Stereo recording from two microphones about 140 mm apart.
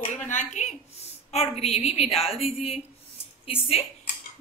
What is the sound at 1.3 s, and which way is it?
A woman's voice, 50° left (ahead or behind).